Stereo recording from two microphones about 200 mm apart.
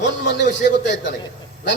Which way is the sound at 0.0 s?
60° left (ahead or behind).